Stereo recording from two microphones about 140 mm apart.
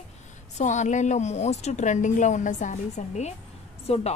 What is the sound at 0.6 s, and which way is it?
A woman's voice, 60° left (ahead or behind).